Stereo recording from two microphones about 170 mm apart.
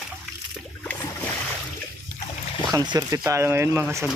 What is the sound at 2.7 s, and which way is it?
Speech, 25° right (ahead or behind).